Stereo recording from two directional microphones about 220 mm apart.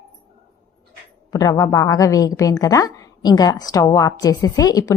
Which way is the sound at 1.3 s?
15° left (ahead or behind).